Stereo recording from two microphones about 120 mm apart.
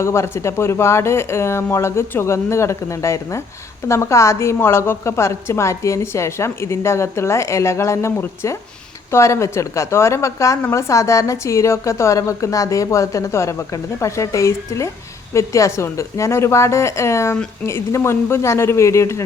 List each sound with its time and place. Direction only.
0.0 s a woman's voice: 20° left (ahead or behind)